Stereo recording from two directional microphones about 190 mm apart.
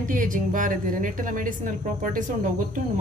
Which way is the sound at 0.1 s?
45° right (ahead or behind).